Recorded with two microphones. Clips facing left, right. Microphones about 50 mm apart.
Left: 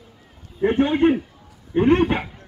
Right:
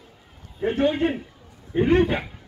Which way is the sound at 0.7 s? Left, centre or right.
Left.